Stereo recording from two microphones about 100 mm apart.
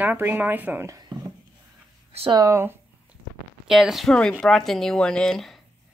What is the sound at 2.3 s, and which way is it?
Speech, 30° right (ahead or behind).